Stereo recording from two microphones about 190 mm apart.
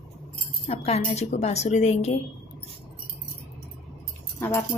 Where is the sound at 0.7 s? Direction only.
35° left (ahead or behind).